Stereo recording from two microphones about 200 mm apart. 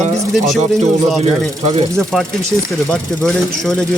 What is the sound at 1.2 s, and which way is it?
Speech, 30° right (ahead or behind).